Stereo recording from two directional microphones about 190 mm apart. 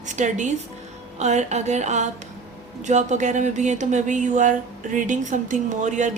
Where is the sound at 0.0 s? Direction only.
40° right (ahead or behind).